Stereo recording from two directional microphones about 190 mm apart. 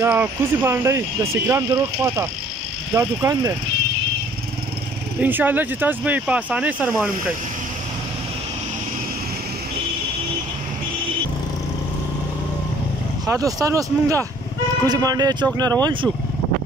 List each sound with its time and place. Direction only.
0.0 s speech: 10° right (ahead or behind)
5.2 s speech: 10° right (ahead or behind)
13.3 s speech: 15° right (ahead or behind)